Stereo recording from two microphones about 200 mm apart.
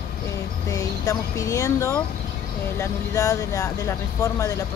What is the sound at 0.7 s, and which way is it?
Speech, 15° left (ahead or behind).